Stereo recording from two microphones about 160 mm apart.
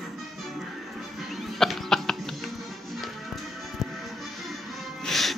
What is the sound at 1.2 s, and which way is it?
Music, centre (ahead or behind).